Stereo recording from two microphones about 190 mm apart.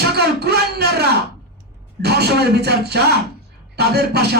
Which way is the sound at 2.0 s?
60° right (ahead or behind).